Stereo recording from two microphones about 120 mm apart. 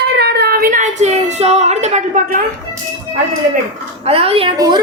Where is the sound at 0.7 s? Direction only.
85° right.